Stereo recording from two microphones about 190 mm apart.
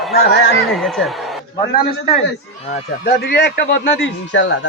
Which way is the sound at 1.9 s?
55° left (ahead or behind).